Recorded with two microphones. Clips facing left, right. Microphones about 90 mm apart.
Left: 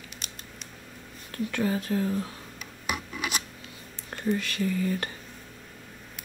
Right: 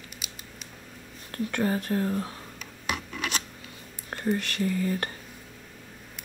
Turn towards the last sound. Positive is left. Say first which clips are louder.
# even
turn(degrees=-45)  # may be behind; listen again after turning